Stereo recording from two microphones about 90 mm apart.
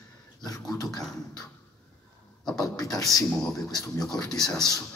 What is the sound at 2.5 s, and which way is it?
A man's voice, 40° left (ahead or behind).